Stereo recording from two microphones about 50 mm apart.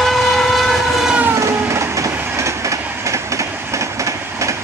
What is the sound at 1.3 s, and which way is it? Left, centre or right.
Train, right.